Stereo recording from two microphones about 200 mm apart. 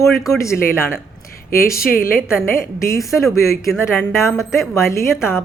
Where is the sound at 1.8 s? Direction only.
45° left (ahead or behind).